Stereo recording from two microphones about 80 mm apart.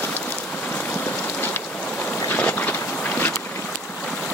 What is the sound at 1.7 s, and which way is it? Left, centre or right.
Boat, centre.